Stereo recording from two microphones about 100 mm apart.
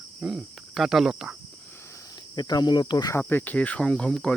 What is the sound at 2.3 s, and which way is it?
Cricket, 45° left (ahead or behind).